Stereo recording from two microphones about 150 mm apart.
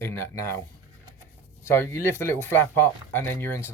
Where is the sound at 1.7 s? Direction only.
15° left (ahead or behind).